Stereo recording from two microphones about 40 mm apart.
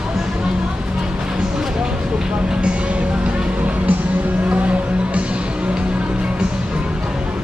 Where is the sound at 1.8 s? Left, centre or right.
Right.